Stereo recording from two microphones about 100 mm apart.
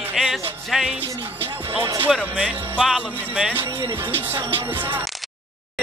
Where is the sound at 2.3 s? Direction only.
15° right (ahead or behind).